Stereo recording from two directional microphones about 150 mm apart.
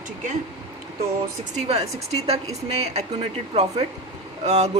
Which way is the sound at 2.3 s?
45° right (ahead or behind).